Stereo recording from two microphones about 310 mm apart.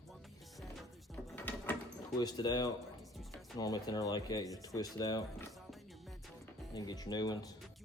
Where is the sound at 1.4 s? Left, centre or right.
Centre.